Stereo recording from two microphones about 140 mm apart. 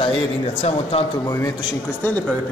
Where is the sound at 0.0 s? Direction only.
45° left (ahead or behind).